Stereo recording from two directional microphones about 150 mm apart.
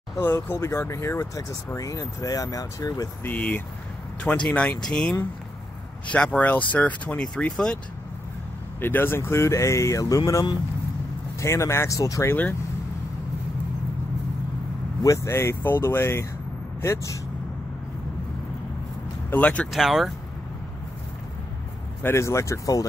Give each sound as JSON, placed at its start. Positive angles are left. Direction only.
{"t": 0.2, "sound": "speech", "side_deg": 15}
{"t": 3.3, "sound": "speech", "side_deg": 10}
{"t": 8.8, "sound": "speech", "side_deg": 15}
{"t": 15.0, "sound": "speech", "side_deg": 20}
{"t": 19.3, "sound": "speech", "side_deg": 10}
{"t": 22.0, "sound": "speech", "side_deg": 20}